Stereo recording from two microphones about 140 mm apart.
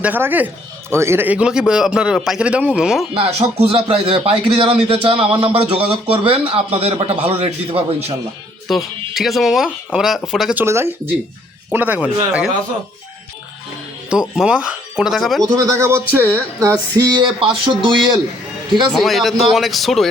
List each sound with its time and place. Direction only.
0.0 s speech: 15° right (ahead or behind)
3.3 s a man's voice: 45° right (ahead or behind)
8.6 s speech: centre (ahead or behind)
10.6 s speech: 20° right (ahead or behind)
14.1 s speech: 5° right (ahead or behind)
15.5 s speech: 20° right (ahead or behind)
17.0 s a man's voice: 30° right (ahead or behind)
18.9 s speech: centre (ahead or behind)